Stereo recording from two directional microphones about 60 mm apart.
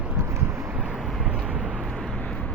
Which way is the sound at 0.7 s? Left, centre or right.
Centre.